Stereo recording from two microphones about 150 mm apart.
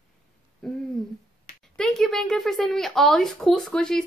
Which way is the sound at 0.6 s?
5° left (ahead or behind).